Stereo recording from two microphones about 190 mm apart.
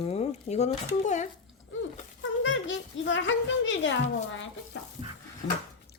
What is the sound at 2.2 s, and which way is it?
Speech, 75° left (ahead or behind).